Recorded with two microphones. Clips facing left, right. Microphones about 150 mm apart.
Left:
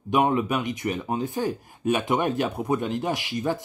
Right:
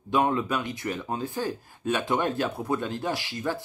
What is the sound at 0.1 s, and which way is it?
Speech, 15° left (ahead or behind).